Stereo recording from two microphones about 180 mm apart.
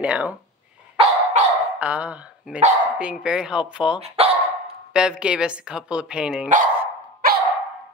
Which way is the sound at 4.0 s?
35° right (ahead or behind).